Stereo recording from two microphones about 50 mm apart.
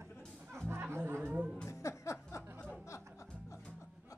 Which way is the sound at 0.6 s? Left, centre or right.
Right.